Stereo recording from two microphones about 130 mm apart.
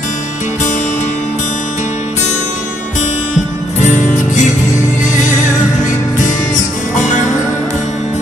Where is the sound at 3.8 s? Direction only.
75° left (ahead or behind).